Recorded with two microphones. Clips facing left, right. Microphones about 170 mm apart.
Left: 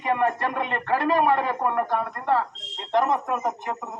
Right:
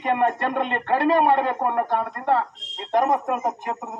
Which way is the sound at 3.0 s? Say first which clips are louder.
Right 2 dB; 40° right (ahead or behind).